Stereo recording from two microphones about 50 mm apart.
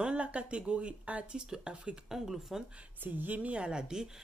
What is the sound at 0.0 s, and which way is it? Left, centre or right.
A woman's voice, right.